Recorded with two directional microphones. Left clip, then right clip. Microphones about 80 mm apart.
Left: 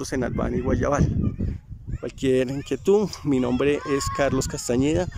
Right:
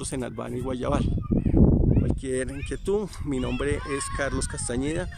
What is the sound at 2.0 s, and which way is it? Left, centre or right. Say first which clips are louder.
Speech: left 6 dB; centre.